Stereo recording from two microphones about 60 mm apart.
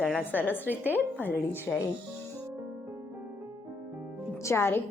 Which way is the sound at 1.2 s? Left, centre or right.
Left.